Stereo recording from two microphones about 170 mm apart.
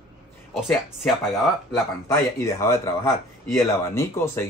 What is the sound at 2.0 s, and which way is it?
Speech, 15° left (ahead or behind).